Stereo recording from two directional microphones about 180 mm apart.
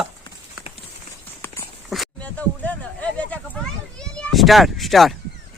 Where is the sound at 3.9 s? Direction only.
5° left (ahead or behind).